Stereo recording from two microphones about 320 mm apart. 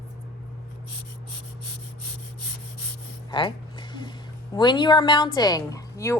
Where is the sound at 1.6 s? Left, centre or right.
Left.